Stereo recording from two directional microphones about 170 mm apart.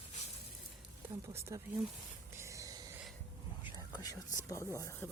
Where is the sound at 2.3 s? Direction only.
20° right (ahead or behind).